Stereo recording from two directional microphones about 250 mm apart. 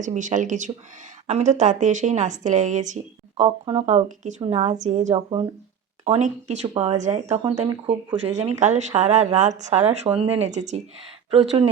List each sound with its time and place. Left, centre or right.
0.0 s a woman's voice: right